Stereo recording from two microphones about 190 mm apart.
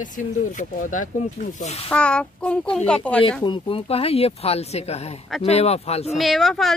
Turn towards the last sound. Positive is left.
turn(degrees=0)  # may be behind; listen again after turning